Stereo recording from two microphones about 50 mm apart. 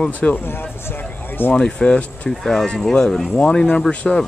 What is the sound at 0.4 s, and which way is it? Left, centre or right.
Speech, left.